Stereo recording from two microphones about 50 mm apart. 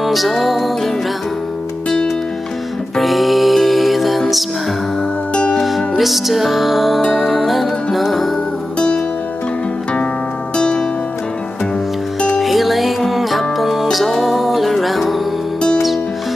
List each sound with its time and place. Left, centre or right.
0.0 s music: centre
3.0 s music: centre
5.3 s music: centre
5.6 s music: centre
8.7 s music: centre
10.5 s music: centre
12.4 s music: centre